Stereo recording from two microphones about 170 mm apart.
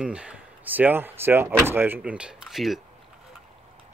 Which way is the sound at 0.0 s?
5° right (ahead or behind).